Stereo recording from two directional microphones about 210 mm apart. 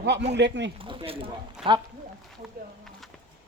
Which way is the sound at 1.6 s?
5° right (ahead or behind).